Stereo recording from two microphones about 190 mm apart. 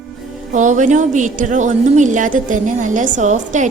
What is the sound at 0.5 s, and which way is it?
A woman's voice, 40° right (ahead or behind).